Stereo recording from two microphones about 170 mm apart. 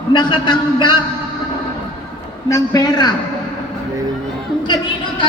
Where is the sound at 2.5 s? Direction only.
20° left (ahead or behind).